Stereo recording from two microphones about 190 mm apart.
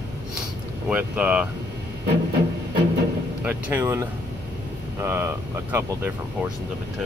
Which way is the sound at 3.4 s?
15° right (ahead or behind).